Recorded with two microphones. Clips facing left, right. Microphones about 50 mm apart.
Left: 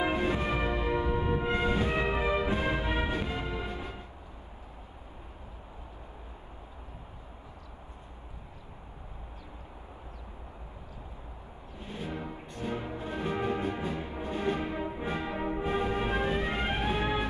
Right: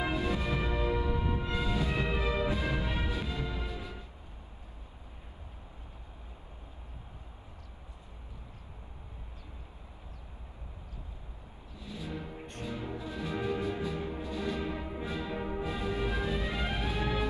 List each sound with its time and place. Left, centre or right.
0.0 s music: left
11.8 s music: left